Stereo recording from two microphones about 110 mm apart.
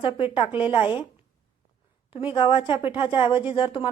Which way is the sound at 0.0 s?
50° left (ahead or behind).